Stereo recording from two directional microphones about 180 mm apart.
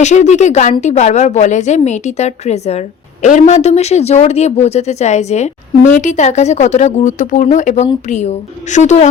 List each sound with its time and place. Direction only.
0.0 s speech: 40° left (ahead or behind)